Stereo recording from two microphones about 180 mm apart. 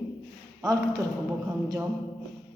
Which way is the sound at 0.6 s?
20° right (ahead or behind).